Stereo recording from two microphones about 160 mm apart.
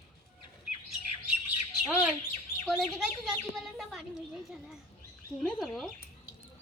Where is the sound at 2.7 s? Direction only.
Centre (ahead or behind).